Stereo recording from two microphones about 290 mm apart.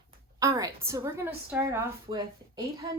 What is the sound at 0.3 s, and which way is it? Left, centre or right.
Speech, centre.